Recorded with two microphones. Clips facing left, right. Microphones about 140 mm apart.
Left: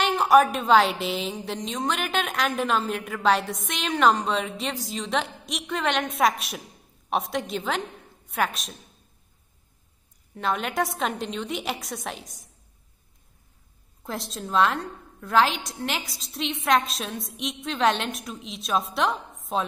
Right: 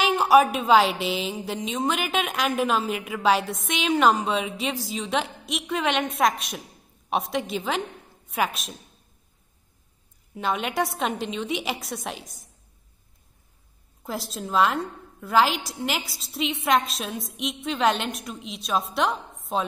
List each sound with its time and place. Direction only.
0.0 s a woman's voice: 5° right (ahead or behind)
10.3 s a woman's voice: centre (ahead or behind)
14.0 s a woman's voice: centre (ahead or behind)